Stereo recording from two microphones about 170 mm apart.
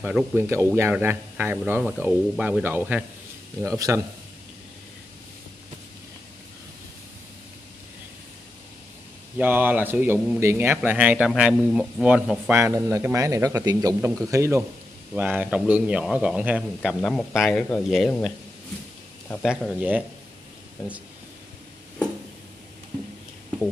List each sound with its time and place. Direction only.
0.0 s a man's voice: 10° right (ahead or behind)
9.4 s speech: 10° right (ahead or behind)
17.0 s speech: 5° left (ahead or behind)
19.4 s speech: centre (ahead or behind)